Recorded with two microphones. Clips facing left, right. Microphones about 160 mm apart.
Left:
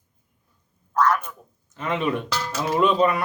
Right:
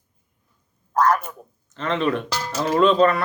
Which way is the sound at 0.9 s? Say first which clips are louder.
Right 2 dB; 40° right (ahead or behind).